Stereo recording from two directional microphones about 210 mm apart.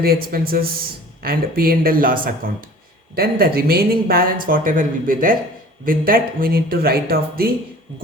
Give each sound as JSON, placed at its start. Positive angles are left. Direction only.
{"t": 0.0, "sound": "speech", "side_deg": -45}